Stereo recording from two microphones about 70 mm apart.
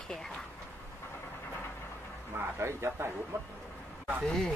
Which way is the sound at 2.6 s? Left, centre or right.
Right.